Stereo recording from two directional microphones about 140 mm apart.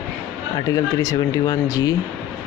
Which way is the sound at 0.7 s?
25° left (ahead or behind).